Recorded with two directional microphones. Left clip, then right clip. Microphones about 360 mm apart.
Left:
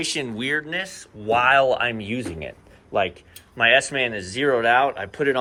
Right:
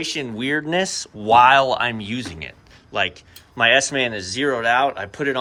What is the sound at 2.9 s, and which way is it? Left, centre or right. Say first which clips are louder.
Speech: even; centre.